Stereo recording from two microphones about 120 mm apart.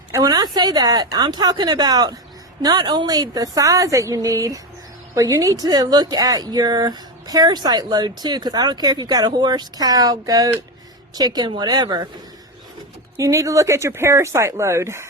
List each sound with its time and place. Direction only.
0.2 s a woman's voice: 35° right (ahead or behind)
13.1 s a woman's voice: 25° right (ahead or behind)